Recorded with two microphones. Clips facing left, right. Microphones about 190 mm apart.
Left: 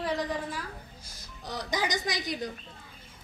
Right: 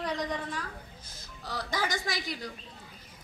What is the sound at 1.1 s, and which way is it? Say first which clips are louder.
A woman's voice: left 2 dB; 20° left (ahead or behind).